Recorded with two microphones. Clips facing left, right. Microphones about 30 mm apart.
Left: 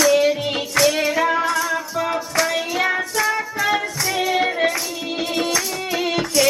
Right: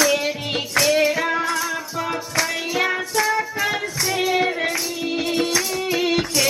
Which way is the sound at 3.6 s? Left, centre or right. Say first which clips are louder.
Left 2 dB; centre.